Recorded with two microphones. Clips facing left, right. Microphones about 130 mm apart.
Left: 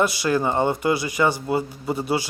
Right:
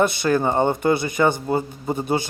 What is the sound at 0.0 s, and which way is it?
Speech, 50° right (ahead or behind).